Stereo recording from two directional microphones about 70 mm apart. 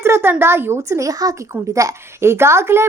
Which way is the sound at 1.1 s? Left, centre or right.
Right.